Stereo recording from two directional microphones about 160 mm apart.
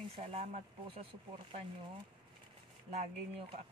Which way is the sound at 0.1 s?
35° right (ahead or behind).